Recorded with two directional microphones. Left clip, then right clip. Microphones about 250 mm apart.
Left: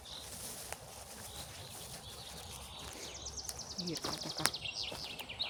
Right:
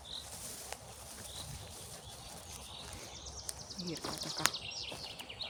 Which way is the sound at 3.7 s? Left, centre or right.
Left.